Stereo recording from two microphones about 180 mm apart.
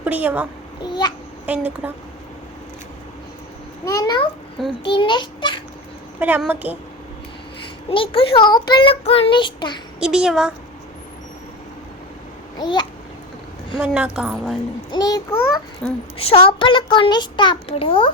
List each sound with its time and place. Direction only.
0.0 s a child's voice: 10° right (ahead or behind)
0.8 s a child's voice: 25° left (ahead or behind)
1.5 s a woman's voice: 10° right (ahead or behind)
3.8 s a child's voice: 20° left (ahead or behind)
6.1 s a woman's voice: 10° right (ahead or behind)
7.9 s a child's voice: 30° left (ahead or behind)
10.0 s a woman's voice: 5° right (ahead or behind)
12.5 s a child's voice: 25° left (ahead or behind)
13.7 s a woman's voice: 5° right (ahead or behind)
14.8 s a child's voice: 20° left (ahead or behind)
15.8 s a woman's voice: 5° left (ahead or behind)
16.1 s a child's voice: 30° left (ahead or behind)